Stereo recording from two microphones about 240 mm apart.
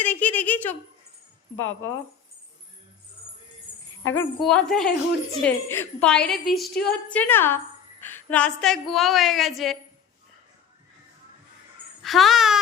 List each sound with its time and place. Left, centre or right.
0.0 s a sound: centre
1.5 s a woman's voice: left
4.1 s a woman's voice: centre
12.0 s a woman's voice: centre